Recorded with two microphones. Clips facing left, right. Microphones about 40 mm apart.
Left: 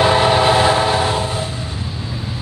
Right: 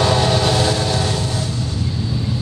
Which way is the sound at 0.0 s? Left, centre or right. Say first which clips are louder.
Left 4 dB; left.